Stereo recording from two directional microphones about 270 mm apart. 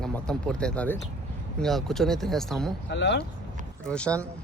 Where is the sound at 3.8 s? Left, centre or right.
Centre.